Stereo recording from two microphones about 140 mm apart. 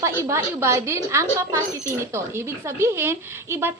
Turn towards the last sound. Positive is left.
turn(degrees=-15)  # may be behind; listen again after turning